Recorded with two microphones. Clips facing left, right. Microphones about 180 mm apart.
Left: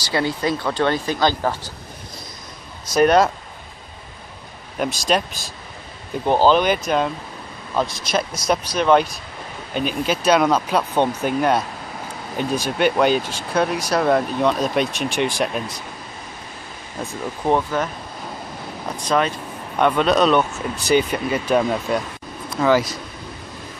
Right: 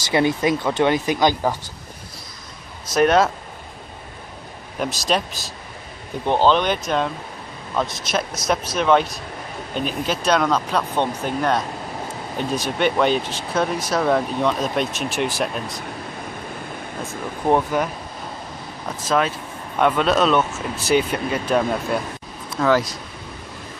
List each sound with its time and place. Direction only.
0.1 s speech: 20° right (ahead or behind)
2.9 s speech: centre (ahead or behind)
4.7 s speech: centre (ahead or behind)
17.5 s speech: 15° right (ahead or behind)
18.9 s speech: 5° right (ahead or behind)